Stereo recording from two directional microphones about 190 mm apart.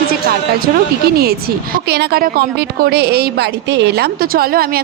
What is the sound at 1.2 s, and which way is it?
A woman's voice, 55° right (ahead or behind).